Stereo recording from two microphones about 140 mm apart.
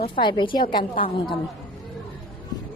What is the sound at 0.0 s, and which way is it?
Speech, 35° left (ahead or behind).